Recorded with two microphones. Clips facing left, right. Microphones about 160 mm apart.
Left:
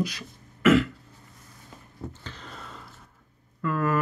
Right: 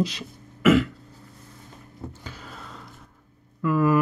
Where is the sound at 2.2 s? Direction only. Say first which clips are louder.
Right 1 dB; 5° right (ahead or behind).